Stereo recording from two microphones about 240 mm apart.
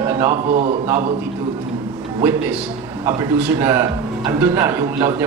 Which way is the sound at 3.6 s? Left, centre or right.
Centre.